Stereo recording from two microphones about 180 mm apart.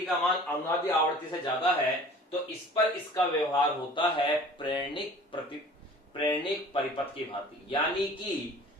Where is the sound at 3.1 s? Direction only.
25° left (ahead or behind).